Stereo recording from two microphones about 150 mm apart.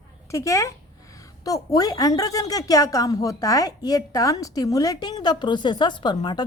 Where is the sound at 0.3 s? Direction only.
20° left (ahead or behind).